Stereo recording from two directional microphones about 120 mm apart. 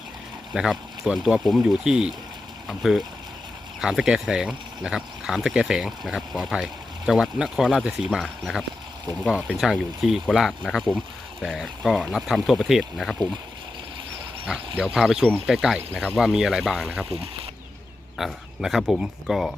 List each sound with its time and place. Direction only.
0.5 s speech: 5° right (ahead or behind)
14.9 s speech: 5° right (ahead or behind)
17.1 s speech: 55° right (ahead or behind)
18.2 s speech: centre (ahead or behind)